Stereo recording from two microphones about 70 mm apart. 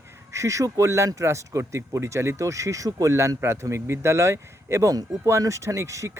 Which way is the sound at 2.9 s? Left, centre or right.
Right.